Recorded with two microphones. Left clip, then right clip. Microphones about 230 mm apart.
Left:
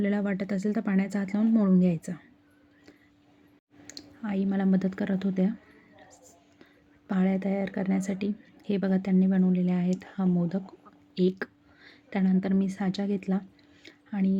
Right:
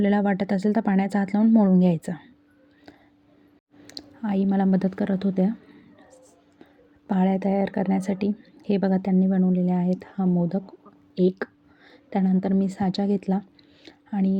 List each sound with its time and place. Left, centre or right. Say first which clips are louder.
0.0 s speech: right 7 dB; centre
3.8 s speech: right 6 dB; centre
7.1 s speech: right 6 dB; centre
10.5 s a sound: right 5 dB; centre
11.9 s speech: right 4 dB; centre
13.8 s a sound: right 4 dB; centre